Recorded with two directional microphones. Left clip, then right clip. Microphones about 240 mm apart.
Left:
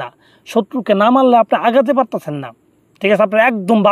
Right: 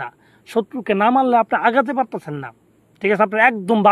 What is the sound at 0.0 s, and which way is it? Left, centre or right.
A man's voice, left.